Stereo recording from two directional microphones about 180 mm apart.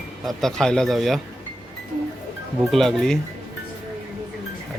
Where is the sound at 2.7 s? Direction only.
Centre (ahead or behind).